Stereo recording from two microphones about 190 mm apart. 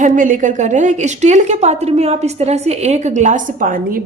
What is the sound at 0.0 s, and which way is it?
Speech, 45° right (ahead or behind).